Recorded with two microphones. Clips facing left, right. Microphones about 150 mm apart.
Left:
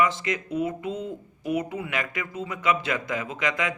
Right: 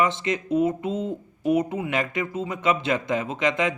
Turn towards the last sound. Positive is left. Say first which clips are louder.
# right 4 dB
turn(degrees=-25)  # may be behind; listen again after turning